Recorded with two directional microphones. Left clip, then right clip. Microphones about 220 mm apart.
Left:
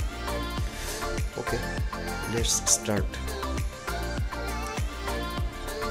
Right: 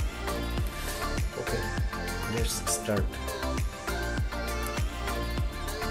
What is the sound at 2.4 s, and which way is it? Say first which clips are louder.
Speech: left 5 dB; 30° left (ahead or behind).